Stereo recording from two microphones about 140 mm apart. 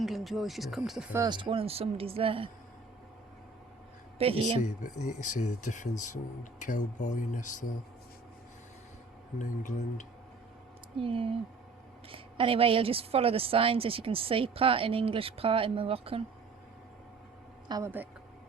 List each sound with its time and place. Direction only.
0.0 s speech: centre (ahead or behind)
1.3 s a woman's voice: 40° right (ahead or behind)
4.2 s a woman's voice: 40° right (ahead or behind)
4.6 s speech: 60° left (ahead or behind)
9.4 s speech: 65° left (ahead or behind)
11.0 s a woman's voice: 40° right (ahead or behind)
17.7 s speech: 25° right (ahead or behind)